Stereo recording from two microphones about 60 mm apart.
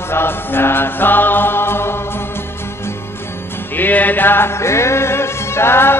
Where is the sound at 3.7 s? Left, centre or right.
Left.